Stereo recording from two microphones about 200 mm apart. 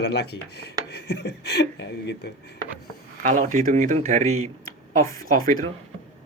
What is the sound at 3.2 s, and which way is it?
Speech, 40° right (ahead or behind).